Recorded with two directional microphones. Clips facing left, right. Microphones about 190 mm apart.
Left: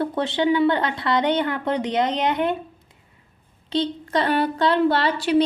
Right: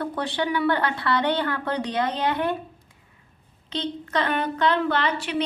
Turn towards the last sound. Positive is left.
turn(degrees=35)  # may be behind; listen again after turning